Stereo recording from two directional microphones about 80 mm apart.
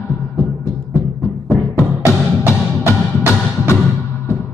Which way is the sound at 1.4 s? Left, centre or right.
Left.